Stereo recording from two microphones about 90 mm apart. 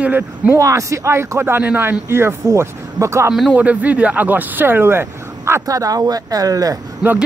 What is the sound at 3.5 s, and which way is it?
A man's voice, 15° right (ahead or behind).